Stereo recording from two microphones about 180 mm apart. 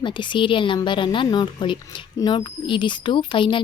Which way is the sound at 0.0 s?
25° left (ahead or behind).